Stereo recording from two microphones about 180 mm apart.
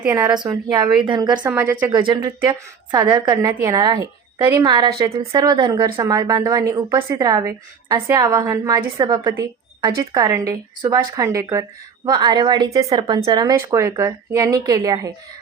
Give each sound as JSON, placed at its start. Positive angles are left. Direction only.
{"t": 0.0, "sound": "a woman's voice", "side_deg": -10}
{"t": 0.3, "sound": "a woman's voice", "side_deg": -20}
{"t": 1.5, "sound": "a woman's voice", "side_deg": -10}
{"t": 1.9, "sound": "a woman's voice", "side_deg": -25}